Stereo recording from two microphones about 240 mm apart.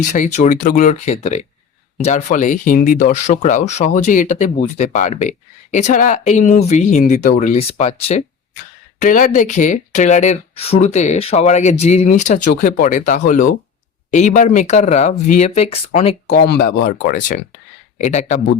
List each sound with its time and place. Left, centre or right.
0.0 s speech: left
16.5 s speech: left